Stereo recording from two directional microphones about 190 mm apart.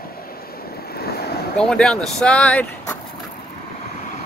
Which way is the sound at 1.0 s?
55° left (ahead or behind).